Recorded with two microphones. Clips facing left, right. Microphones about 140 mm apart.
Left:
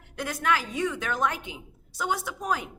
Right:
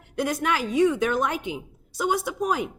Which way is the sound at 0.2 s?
15° right (ahead or behind).